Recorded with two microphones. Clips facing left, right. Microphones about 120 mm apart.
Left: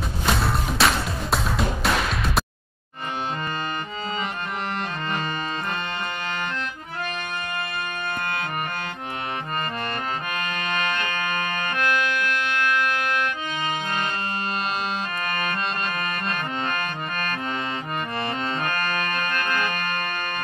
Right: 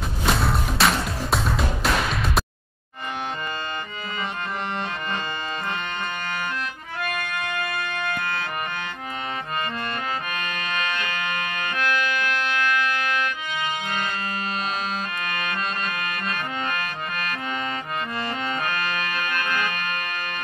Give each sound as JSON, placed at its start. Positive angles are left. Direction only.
{"t": 0.3, "sound": "music", "side_deg": 0}
{"t": 10.5, "sound": "music", "side_deg": 35}
{"t": 19.2, "sound": "organ", "side_deg": 45}